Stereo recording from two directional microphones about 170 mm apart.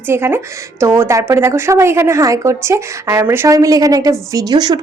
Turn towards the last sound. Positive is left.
turn(degrees=-25)  # may be behind; listen again after turning